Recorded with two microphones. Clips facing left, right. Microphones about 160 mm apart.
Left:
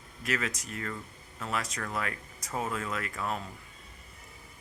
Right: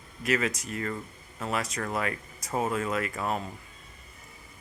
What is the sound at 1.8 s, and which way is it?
Speech, 20° right (ahead or behind).